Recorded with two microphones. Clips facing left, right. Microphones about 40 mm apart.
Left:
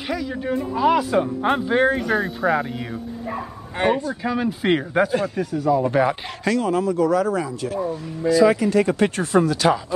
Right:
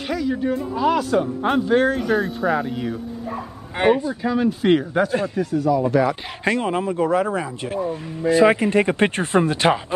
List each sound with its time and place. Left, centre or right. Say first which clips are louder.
0.1 s speech: right 2 dB; centre
3.7 s speech: right 3 dB; centre
5.9 s speech: even; left
6.4 s speech: left 1 dB; right